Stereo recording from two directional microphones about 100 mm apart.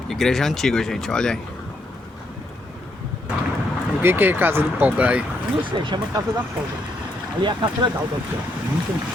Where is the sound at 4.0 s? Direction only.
20° right (ahead or behind).